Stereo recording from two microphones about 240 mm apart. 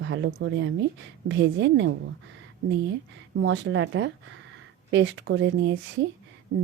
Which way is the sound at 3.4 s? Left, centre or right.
Right.